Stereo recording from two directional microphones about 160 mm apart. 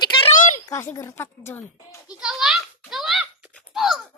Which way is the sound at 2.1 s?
5° right (ahead or behind).